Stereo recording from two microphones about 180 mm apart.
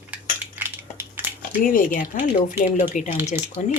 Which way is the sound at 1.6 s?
50° left (ahead or behind).